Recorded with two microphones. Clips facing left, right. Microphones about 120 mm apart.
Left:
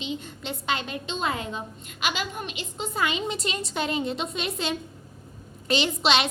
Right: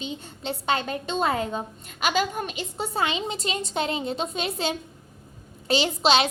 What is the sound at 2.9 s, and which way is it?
A woman's voice, 25° right (ahead or behind).